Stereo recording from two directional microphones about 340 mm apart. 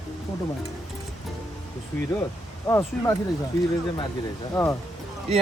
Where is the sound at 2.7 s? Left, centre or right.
Centre.